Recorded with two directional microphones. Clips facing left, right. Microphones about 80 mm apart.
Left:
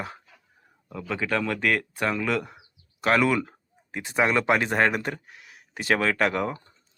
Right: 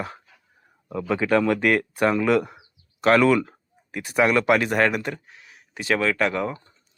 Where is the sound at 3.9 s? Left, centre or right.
Left.